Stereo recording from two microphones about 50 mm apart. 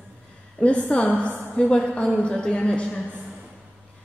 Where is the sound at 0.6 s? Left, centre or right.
Left.